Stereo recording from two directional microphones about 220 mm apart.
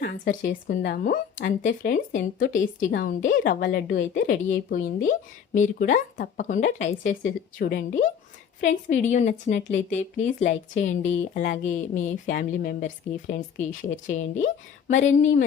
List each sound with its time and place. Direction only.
0.0 s speech: 40° left (ahead or behind)